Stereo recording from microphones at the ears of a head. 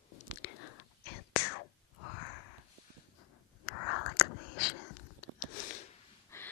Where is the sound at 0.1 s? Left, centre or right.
Left.